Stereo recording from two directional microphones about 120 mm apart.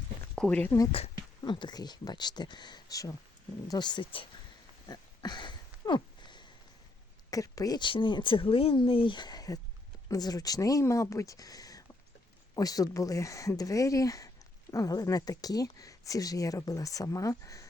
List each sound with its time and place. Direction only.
0.3 s speech: 10° left (ahead or behind)
1.5 s speech: 40° left (ahead or behind)
4.9 s a sound: 35° left (ahead or behind)
7.3 s speech: 30° left (ahead or behind)